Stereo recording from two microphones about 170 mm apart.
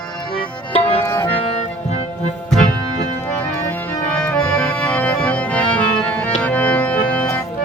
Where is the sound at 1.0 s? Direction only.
15° left (ahead or behind).